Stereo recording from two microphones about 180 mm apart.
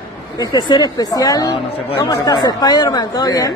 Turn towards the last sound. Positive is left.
turn(degrees=20)  # may be behind; listen again after turning